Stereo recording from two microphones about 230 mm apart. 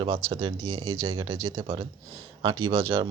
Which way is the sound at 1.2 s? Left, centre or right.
Centre.